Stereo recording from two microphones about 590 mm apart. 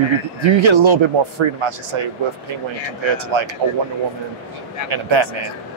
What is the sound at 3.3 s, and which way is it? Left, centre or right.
Speech, right.